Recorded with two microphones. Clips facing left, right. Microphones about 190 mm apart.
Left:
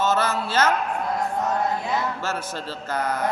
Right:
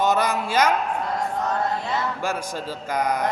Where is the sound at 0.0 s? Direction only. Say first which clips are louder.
Right 1 dB; 15° right (ahead or behind).